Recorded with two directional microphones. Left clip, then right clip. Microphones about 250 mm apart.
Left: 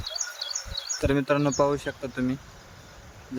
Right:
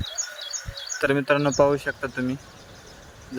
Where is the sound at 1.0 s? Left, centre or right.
Centre.